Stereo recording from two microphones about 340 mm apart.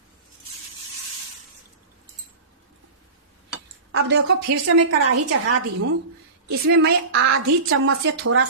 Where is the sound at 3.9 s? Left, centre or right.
Right.